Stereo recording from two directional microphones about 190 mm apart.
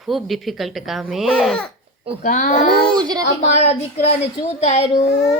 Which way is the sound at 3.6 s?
35° left (ahead or behind).